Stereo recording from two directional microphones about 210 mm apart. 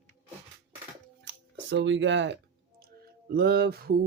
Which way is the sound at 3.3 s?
50° right (ahead or behind).